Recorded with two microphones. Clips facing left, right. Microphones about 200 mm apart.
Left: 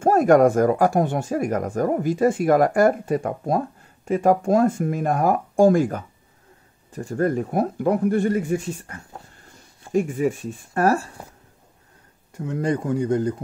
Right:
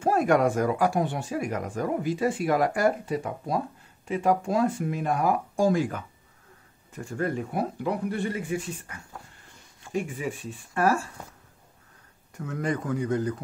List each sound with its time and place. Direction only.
0.0 s speech: 45° left (ahead or behind)
12.4 s speech: 25° left (ahead or behind)